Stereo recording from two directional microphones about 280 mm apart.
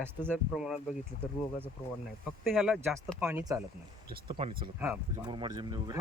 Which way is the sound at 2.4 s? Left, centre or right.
Centre.